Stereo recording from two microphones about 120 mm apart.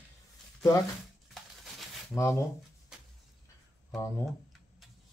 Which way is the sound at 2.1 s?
25° left (ahead or behind).